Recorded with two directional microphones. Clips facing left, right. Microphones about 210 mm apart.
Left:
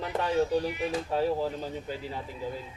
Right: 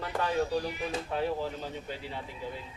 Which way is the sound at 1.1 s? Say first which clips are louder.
Left 4 dB; 35° left (ahead or behind).